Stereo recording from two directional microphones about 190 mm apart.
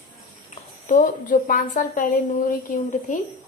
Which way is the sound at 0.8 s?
45° left (ahead or behind).